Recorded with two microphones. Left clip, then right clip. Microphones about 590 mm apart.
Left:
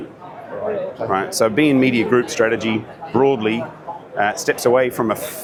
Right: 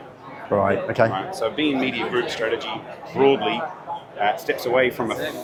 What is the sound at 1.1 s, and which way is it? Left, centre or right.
A man's voice, left.